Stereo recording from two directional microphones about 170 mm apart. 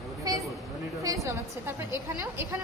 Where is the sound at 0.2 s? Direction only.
20° right (ahead or behind).